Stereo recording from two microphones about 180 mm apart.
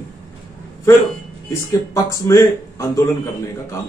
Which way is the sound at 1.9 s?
20° left (ahead or behind).